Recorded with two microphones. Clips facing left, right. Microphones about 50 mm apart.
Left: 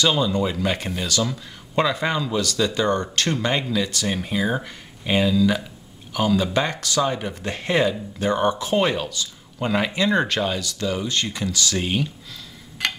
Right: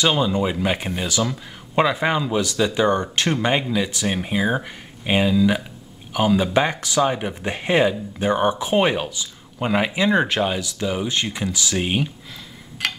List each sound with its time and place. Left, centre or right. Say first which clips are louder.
0.0 s speech: right 1 dB; centre